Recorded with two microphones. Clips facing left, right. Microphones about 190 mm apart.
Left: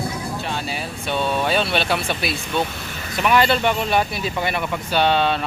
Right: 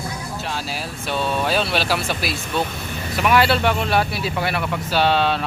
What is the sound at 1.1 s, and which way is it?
Speech, centre (ahead or behind).